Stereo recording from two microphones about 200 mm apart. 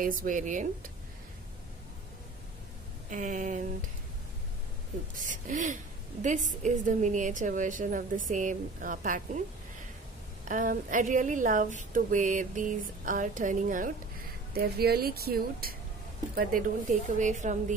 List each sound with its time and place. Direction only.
0.0 s speech: 45° right (ahead or behind)
3.1 s speech: 40° right (ahead or behind)
5.2 s speech: 40° right (ahead or behind)
10.5 s speech: 40° right (ahead or behind)